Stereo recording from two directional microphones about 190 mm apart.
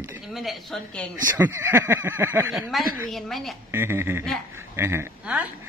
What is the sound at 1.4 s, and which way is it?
A man's voice, 10° right (ahead or behind).